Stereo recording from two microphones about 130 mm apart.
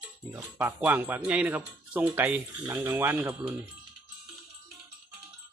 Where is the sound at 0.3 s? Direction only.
10° right (ahead or behind).